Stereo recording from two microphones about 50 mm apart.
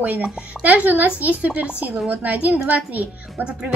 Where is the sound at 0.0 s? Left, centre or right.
Right.